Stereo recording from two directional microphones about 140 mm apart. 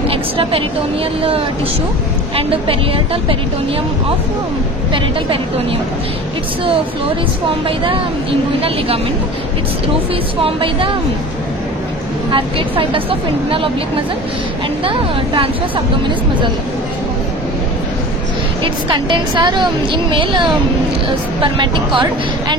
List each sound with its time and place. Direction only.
0.1 s vehicle: 40° right (ahead or behind)
2.3 s a woman's voice: 40° right (ahead or behind)
7.6 s speech: 40° right (ahead or behind)
10.4 s a woman's voice: 40° right (ahead or behind)
12.3 s a woman's voice: 40° right (ahead or behind)
14.9 s a woman's voice: 40° right (ahead or behind)
18.6 s a woman's voice: 35° right (ahead or behind)